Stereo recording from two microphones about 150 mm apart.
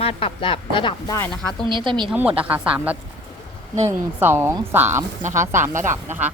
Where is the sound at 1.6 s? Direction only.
30° right (ahead or behind).